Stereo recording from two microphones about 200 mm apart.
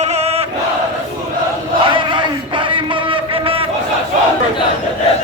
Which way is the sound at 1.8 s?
25° right (ahead or behind).